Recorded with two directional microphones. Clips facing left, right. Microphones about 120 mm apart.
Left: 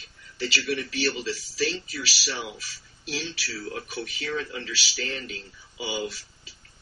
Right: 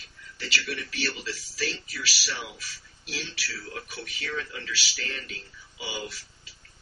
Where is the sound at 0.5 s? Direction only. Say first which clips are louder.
Left 4 dB; 30° left (ahead or behind).